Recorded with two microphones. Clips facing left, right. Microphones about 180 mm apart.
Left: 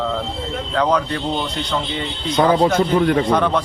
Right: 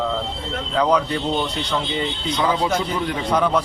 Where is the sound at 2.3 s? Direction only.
45° left (ahead or behind).